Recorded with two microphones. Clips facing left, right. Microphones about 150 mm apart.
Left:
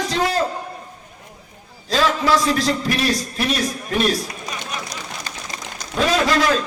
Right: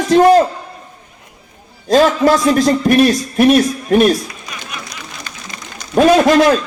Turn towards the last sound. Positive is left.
turn(degrees=-55)  # may be behind; listen again after turning